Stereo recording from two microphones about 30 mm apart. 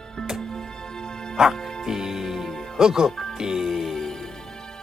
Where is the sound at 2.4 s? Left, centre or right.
Centre.